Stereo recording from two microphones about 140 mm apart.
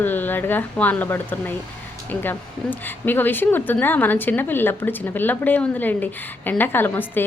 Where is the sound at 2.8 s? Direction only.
15° left (ahead or behind).